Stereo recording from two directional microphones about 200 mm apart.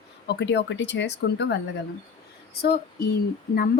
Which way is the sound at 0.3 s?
60° left (ahead or behind).